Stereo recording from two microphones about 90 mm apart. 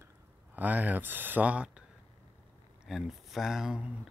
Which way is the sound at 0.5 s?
20° right (ahead or behind).